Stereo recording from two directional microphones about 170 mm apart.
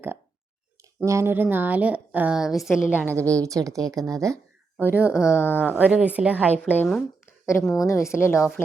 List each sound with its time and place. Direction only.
0.9 s a woman's voice: 15° right (ahead or behind)
3.1 s a woman's voice: 15° right (ahead or behind)
5.3 s speech: 15° left (ahead or behind)
5.5 s a woman's voice: 10° right (ahead or behind)
6.6 s a woman's voice: 5° left (ahead or behind)
7.7 s speech: 20° left (ahead or behind)